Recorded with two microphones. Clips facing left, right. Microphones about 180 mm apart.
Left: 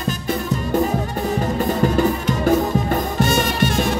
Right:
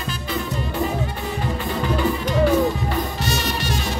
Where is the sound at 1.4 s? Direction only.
45° left (ahead or behind).